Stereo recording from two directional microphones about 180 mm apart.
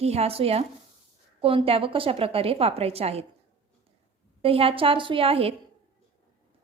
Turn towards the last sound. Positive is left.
turn(degrees=-30)  # may be behind; listen again after turning